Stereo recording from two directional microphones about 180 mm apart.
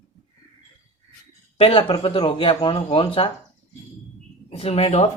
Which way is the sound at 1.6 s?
30° left (ahead or behind).